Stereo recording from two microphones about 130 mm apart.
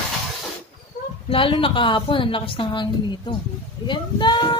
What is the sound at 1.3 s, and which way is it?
A woman's voice, 40° left (ahead or behind).